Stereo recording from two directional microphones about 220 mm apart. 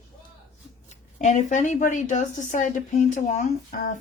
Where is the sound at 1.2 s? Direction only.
35° left (ahead or behind).